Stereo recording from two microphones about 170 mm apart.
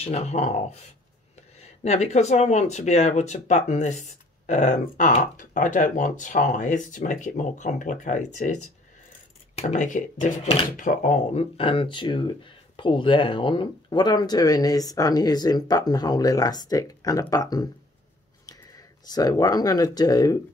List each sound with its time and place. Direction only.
0.0 s speech: 40° left (ahead or behind)
9.6 s speech: 45° left (ahead or behind)
11.5 s speech: 30° left (ahead or behind)